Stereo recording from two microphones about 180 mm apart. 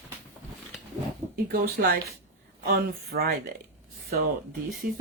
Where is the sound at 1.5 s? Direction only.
50° right (ahead or behind).